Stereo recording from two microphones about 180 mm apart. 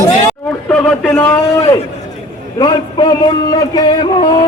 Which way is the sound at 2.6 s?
25° left (ahead or behind).